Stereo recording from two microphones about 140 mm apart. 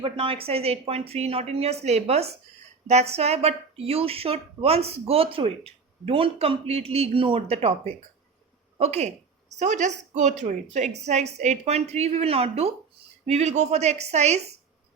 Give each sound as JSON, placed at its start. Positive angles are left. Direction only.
{"t": 0.0, "sound": "speech", "side_deg": -40}